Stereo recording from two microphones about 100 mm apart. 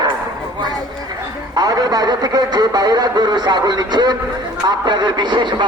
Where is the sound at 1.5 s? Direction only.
40° right (ahead or behind).